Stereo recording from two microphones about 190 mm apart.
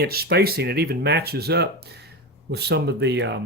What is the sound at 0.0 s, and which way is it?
Speech, 55° right (ahead or behind).